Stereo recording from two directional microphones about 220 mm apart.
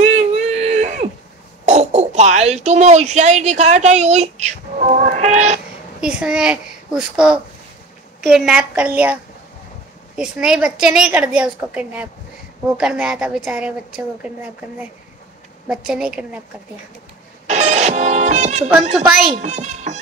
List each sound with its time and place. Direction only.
0.0 s whimper: 30° right (ahead or behind)
1.7 s speech: 30° right (ahead or behind)
5.9 s a child's voice: 5° right (ahead or behind)
17.5 s music: 30° right (ahead or behind)
18.9 s a woman's voice: centre (ahead or behind)
19.3 s a child's voice: 30° right (ahead or behind)